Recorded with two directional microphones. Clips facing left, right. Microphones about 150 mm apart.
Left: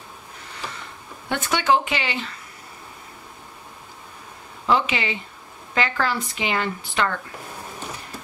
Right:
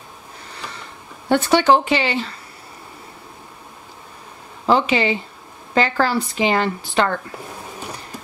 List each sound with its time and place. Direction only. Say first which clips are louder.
1.3 s speech: right 6 dB; 35° right (ahead or behind)
4.6 s speech: right 5 dB; 35° right (ahead or behind)